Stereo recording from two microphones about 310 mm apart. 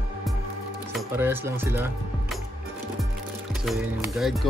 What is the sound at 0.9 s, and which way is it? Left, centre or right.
Speech, centre.